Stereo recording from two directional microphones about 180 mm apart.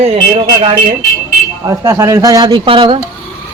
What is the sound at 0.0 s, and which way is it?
Speech, 35° right (ahead or behind).